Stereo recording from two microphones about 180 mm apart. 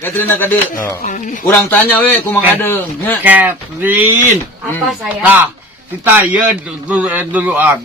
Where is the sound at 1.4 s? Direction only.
10° left (ahead or behind).